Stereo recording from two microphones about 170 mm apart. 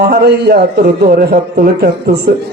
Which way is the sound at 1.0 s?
60° right (ahead or behind).